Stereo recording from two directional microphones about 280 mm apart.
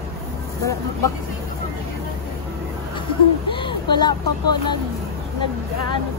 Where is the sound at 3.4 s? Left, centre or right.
Centre.